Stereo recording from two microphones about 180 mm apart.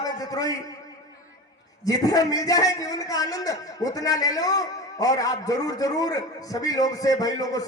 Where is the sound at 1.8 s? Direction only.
20° left (ahead or behind).